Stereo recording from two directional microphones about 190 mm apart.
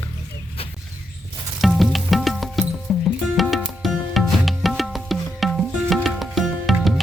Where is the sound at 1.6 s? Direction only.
Centre (ahead or behind).